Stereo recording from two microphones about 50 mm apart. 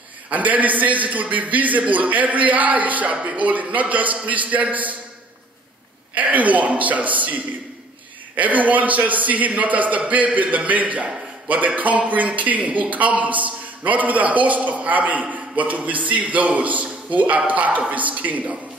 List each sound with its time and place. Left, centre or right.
0.3 s a man's voice: right
6.1 s a man's voice: right